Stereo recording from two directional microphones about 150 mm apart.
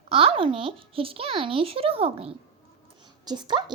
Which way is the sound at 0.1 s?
40° right (ahead or behind).